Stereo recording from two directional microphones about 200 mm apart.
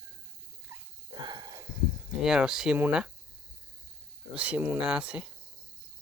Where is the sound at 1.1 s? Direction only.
20° right (ahead or behind).